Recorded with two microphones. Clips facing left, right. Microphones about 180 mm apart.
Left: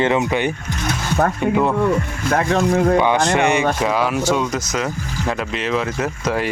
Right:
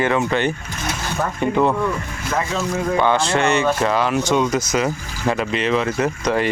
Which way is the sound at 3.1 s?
15° left (ahead or behind).